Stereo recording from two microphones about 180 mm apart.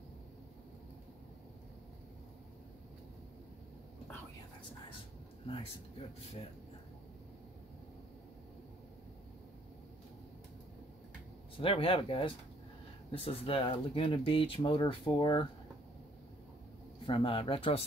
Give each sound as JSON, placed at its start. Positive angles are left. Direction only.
{"t": 11.6, "sound": "speech", "side_deg": 30}
{"t": 17.0, "sound": "speech", "side_deg": 30}